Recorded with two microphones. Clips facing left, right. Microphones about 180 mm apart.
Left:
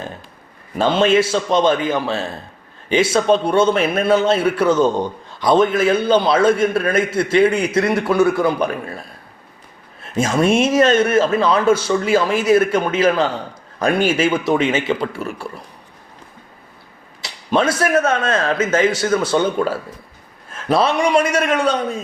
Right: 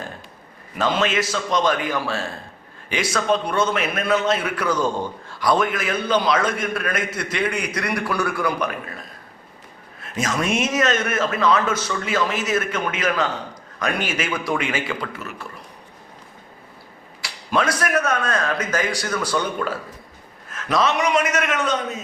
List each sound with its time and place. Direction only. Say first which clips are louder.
0.8 s a man's voice: left 7 dB; 30° left (ahead or behind)
17.2 s a man's voice: left 4 dB; 25° left (ahead or behind)